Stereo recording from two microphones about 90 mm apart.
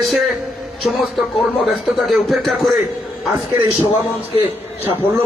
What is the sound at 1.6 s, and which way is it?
A man's voice, centre (ahead or behind).